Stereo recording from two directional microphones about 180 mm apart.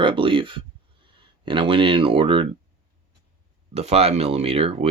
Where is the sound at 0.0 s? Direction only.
30° right (ahead or behind).